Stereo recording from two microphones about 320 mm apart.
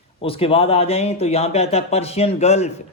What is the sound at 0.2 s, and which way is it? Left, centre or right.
Speech, centre.